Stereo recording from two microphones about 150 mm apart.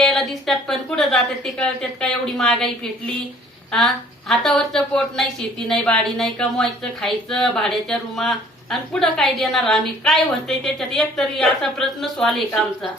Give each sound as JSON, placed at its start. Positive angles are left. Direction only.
{"t": 0.0, "sound": "a woman's voice", "side_deg": 0}
{"t": 3.7, "sound": "a woman's voice", "side_deg": 5}